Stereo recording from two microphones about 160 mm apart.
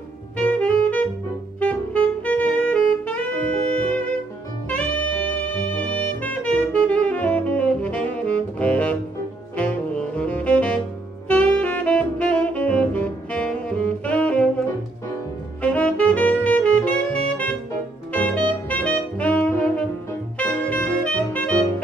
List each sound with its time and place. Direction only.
0.4 s saxophone: 10° left (ahead or behind)
15.6 s saxophone: 10° left (ahead or behind)
18.1 s music: 10° left (ahead or behind)
18.5 s saxophone: 10° left (ahead or behind)